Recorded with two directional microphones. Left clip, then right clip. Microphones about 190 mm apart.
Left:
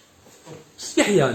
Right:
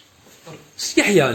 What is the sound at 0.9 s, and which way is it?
Speech, 10° right (ahead or behind).